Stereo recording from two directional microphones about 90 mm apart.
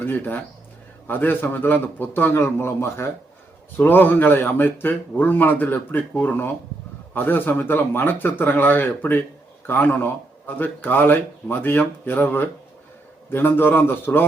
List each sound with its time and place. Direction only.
0.0 s a man's voice: 20° left (ahead or behind)